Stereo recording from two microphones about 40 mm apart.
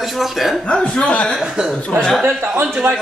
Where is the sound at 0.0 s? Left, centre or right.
Centre.